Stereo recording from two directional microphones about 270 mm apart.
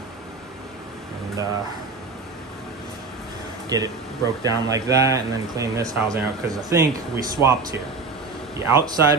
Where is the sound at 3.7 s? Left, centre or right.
Centre.